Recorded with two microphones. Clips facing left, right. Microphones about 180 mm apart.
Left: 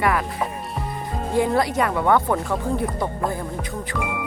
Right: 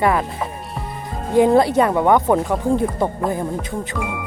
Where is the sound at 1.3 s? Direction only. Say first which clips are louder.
Right 7 dB; 20° right (ahead or behind).